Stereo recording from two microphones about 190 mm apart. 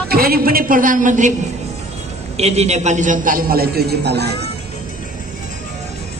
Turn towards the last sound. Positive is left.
turn(degrees=-60)  # may be behind; listen again after turning